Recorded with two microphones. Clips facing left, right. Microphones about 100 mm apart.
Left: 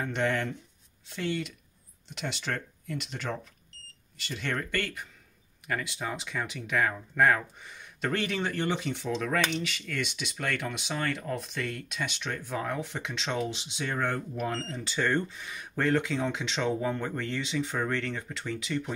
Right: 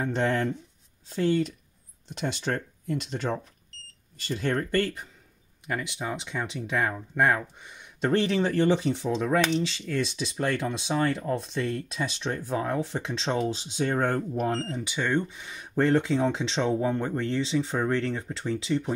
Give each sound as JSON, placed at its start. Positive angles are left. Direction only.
{"t": 0.0, "sound": "speech", "side_deg": -30}
{"t": 5.7, "sound": "speech", "side_deg": -20}
{"t": 8.1, "sound": "speech", "side_deg": -30}
{"t": 14.6, "sound": "speech", "side_deg": -15}